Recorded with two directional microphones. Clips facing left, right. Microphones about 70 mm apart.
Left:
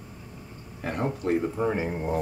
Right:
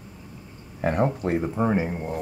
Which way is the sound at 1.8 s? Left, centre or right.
Centre.